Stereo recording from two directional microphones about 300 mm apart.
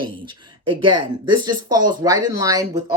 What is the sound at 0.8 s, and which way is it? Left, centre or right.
Speech, right.